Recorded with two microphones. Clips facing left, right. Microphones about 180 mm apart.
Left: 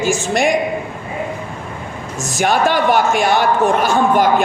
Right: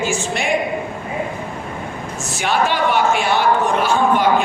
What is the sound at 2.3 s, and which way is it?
A man's voice, 45° left (ahead or behind).